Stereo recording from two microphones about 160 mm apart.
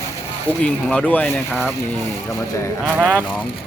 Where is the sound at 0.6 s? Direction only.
10° left (ahead or behind).